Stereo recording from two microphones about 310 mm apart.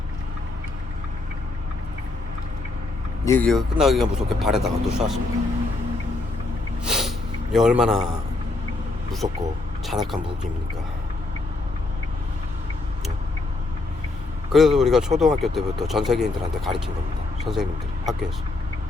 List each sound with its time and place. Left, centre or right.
3.2 s a man's voice: centre
6.8 s snort: centre
7.5 s a man's voice: centre
9.2 s speech: centre
9.8 s speech: centre
14.5 s a man's voice: centre